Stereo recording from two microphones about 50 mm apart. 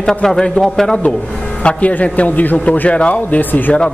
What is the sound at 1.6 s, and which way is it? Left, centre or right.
Speech, left.